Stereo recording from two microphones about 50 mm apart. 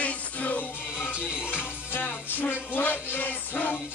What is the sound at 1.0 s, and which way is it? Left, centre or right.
Music, right.